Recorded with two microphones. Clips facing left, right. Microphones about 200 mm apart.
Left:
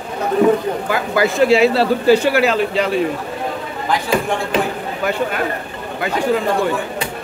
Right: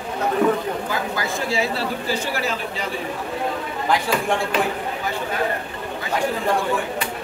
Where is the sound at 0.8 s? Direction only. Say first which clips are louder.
Left 8 dB; 70° left (ahead or behind).